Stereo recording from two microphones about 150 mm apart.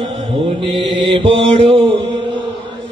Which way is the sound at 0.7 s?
35° right (ahead or behind).